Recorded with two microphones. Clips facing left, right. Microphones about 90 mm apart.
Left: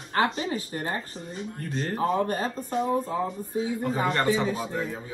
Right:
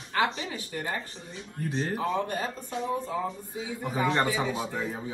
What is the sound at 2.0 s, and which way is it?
Speech, 40° left (ahead or behind).